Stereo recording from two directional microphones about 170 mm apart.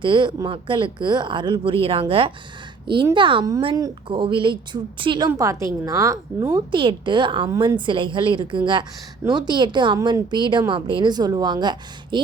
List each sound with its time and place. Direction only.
0.0 s a woman's voice: 25° right (ahead or behind)
5.3 s a woman's voice: 20° right (ahead or behind)
7.5 s a woman's voice: 20° right (ahead or behind)
7.9 s a woman's voice: 30° right (ahead or behind)